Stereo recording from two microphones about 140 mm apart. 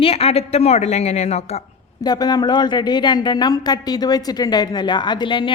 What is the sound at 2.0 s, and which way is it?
A woman's voice, 30° left (ahead or behind).